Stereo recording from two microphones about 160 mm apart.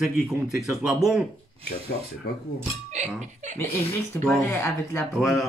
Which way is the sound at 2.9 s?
45° right (ahead or behind).